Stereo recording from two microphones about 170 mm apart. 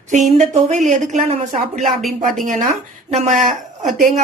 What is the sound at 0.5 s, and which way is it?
A woman's voice, 45° right (ahead or behind).